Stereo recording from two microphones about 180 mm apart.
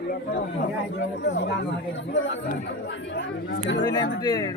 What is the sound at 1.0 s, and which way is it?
Speech, 75° left (ahead or behind).